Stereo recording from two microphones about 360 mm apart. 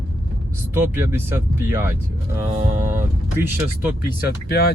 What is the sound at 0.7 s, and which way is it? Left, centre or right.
Speech, centre.